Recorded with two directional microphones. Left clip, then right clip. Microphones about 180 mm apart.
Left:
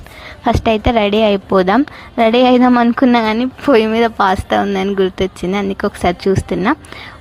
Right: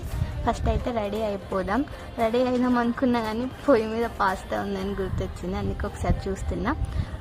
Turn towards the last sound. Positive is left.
turn(degrees=35)  # may be behind; listen again after turning